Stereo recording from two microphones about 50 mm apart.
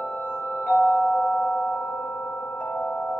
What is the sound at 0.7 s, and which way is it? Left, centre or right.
Music, left.